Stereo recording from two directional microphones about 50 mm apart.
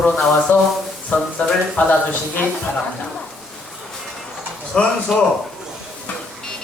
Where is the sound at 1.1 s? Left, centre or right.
Left.